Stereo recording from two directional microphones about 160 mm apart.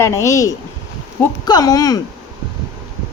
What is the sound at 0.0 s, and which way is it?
A woman's voice, 20° left (ahead or behind).